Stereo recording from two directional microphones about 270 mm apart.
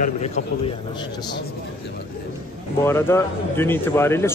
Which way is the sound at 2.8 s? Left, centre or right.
Centre.